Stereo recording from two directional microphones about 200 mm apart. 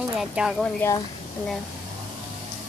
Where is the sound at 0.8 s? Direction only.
10° left (ahead or behind).